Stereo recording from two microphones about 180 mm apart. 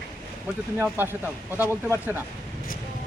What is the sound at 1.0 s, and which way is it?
Speech, 10° right (ahead or behind).